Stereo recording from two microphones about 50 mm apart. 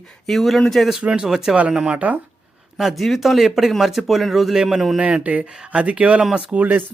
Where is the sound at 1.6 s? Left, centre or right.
Centre.